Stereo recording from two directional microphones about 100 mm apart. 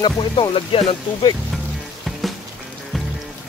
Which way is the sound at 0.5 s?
70° left (ahead or behind).